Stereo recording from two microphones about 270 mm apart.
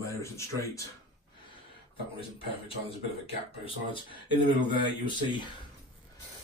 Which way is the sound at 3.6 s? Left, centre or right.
Centre.